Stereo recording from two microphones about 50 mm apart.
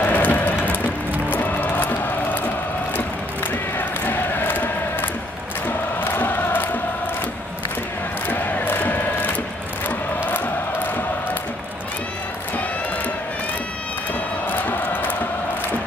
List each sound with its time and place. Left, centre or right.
0.0 s rain: left
1.3 s music: left
3.7 s a sound: left
5.7 s music: left
8.3 s crowd: left
14.5 s music: left